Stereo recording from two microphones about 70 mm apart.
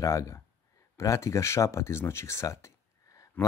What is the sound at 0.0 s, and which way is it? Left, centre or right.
Speech, left.